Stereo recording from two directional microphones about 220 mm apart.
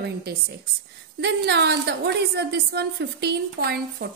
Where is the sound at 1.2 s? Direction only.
50° right (ahead or behind).